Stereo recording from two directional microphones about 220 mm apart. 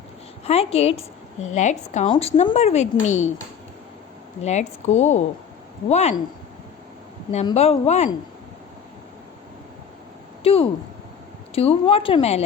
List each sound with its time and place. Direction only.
0.4 s a woman's voice: 30° left (ahead or behind)
4.4 s speech: 30° left (ahead or behind)
7.5 s a woman's voice: 30° left (ahead or behind)
10.4 s a woman's voice: 25° left (ahead or behind)